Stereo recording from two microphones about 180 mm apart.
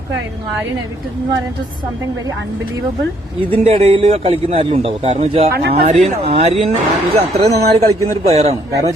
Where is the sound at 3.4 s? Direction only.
35° right (ahead or behind).